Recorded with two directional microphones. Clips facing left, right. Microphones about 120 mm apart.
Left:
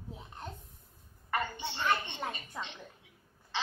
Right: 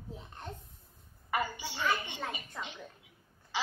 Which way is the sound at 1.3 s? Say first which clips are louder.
Right 1 dB; 10° right (ahead or behind).